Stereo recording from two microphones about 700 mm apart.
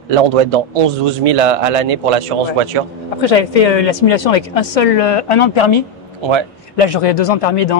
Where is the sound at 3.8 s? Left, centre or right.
Left.